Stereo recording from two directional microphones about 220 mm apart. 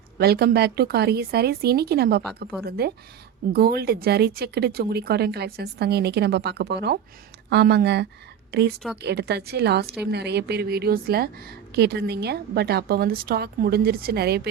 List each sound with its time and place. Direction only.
0.2 s a woman's voice: 45° right (ahead or behind)